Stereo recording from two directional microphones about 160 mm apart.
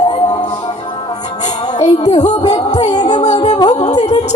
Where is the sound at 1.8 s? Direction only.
45° left (ahead or behind).